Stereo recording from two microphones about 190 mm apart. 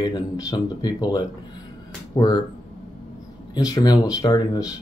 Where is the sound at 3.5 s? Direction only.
20° left (ahead or behind).